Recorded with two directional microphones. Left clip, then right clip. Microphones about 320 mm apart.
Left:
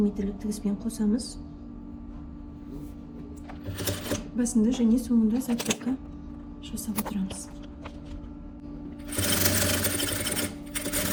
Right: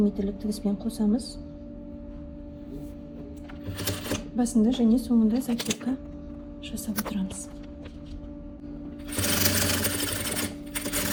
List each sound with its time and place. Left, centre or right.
0.0 s speech: centre
3.8 s sewing machine: centre
4.4 s speech: centre
5.3 s speech: centre
5.5 s speech: centre
9.0 s sewing machine: centre